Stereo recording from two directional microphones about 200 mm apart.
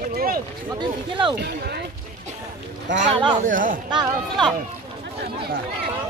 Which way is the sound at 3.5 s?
40° right (ahead or behind).